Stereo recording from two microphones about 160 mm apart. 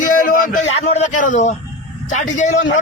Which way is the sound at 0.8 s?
40° left (ahead or behind).